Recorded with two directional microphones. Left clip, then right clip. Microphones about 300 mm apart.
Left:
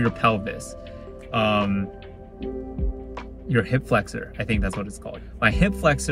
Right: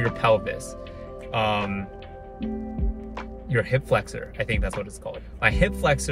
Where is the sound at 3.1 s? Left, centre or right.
Centre.